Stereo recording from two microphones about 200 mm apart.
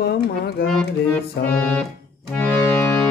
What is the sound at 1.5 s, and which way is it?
Music, 5° left (ahead or behind).